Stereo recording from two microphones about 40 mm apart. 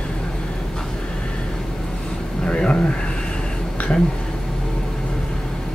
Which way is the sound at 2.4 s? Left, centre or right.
Left.